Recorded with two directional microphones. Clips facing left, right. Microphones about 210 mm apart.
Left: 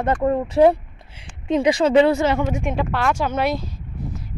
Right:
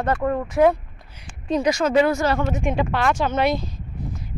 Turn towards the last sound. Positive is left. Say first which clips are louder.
# right 1 dB
turn(degrees=5)  # may be behind; listen again after turning